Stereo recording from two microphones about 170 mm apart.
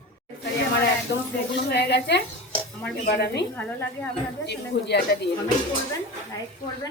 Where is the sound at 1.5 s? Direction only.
80° left.